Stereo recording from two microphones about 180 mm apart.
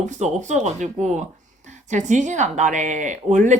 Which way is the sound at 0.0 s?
40° right (ahead or behind).